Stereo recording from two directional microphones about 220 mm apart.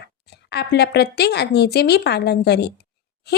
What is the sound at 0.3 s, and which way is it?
Speech, 50° left (ahead or behind).